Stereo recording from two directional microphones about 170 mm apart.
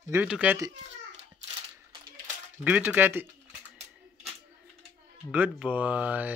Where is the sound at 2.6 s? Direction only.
10° right (ahead or behind).